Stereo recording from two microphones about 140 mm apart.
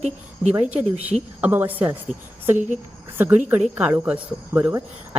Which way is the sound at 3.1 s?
15° right (ahead or behind).